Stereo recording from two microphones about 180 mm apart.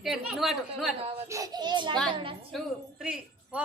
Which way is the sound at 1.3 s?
20° right (ahead or behind).